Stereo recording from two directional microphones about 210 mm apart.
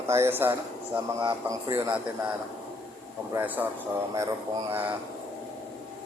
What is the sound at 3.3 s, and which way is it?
Speech, 10° right (ahead or behind).